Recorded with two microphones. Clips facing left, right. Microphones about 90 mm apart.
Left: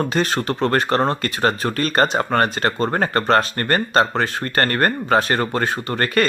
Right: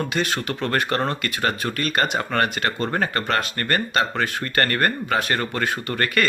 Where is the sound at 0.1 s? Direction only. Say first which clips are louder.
Left 4 dB; 40° left (ahead or behind).